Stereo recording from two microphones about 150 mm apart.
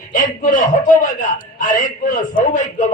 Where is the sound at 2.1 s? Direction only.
60° left (ahead or behind).